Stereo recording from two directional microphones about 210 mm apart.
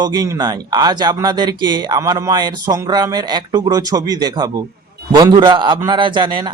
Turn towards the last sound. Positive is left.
turn(degrees=-20)  # may be behind; listen again after turning